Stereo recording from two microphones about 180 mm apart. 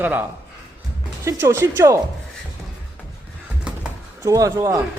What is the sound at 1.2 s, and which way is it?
Speech, 15° right (ahead or behind).